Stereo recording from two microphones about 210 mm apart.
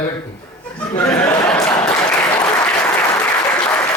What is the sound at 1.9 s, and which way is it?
Applause, 10° left (ahead or behind).